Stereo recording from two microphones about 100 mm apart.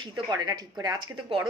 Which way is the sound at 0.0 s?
40° right (ahead or behind).